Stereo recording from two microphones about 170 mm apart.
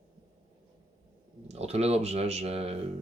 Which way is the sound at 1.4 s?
40° right (ahead or behind).